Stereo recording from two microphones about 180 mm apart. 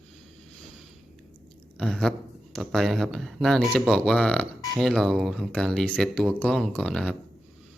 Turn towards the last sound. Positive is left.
turn(degrees=5)  # may be behind; listen again after turning